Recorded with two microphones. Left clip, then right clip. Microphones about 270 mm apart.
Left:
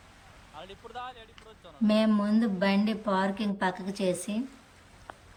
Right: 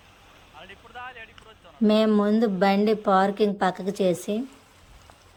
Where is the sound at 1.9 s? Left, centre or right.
Centre.